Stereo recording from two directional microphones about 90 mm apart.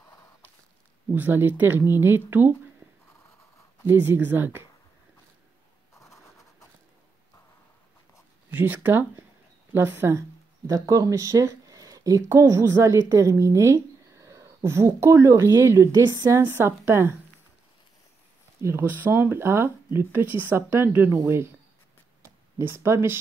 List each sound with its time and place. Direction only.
1.1 s speech: 20° right (ahead or behind)
3.8 s speech: 25° right (ahead or behind)
5.9 s scratch: 35° left (ahead or behind)
8.5 s speech: 20° right (ahead or behind)
10.7 s a woman's voice: 40° right (ahead or behind)
18.6 s speech: 30° right (ahead or behind)
22.6 s speech: 25° right (ahead or behind)